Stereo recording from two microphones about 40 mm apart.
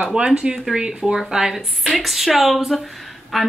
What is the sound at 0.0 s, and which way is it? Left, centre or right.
Speech, centre.